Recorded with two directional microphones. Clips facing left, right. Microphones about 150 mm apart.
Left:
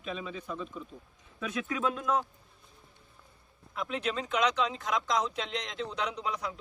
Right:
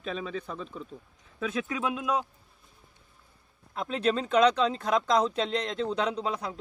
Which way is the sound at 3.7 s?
35° right (ahead or behind).